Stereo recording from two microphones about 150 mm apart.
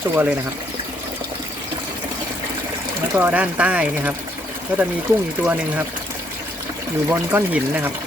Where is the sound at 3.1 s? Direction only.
10° right (ahead or behind).